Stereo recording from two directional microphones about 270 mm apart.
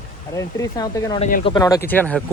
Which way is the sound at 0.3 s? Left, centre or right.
Centre.